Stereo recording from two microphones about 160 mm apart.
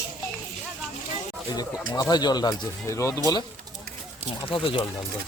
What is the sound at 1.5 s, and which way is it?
Speech, 25° left (ahead or behind).